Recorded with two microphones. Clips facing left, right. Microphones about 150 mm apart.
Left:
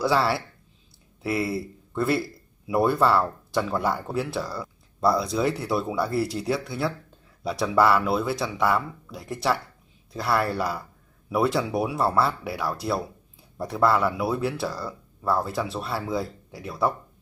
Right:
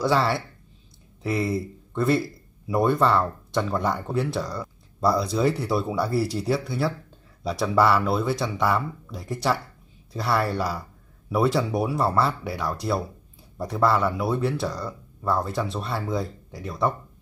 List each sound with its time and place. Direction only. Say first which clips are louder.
0.0 s speech: even; centre (ahead or behind)